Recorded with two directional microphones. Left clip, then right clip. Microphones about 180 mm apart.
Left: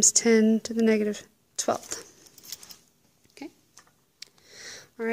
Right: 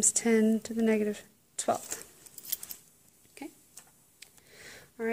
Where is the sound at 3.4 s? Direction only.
15° left (ahead or behind).